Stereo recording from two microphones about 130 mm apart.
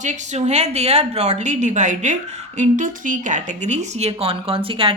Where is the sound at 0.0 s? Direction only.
65° right (ahead or behind).